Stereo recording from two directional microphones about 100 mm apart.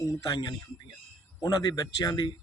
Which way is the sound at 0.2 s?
40° left (ahead or behind).